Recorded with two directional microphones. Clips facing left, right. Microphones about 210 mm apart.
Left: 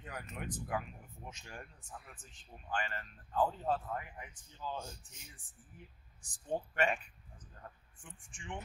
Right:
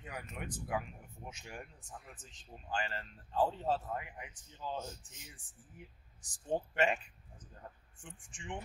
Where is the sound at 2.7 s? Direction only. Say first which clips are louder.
Right 1 dB; 30° right (ahead or behind).